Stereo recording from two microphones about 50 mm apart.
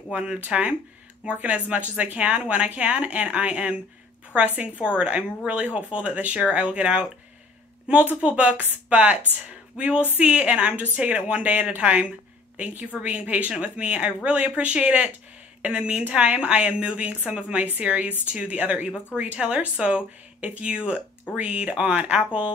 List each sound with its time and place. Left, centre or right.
0.1 s a woman's voice: right
8.2 s a woman's voice: right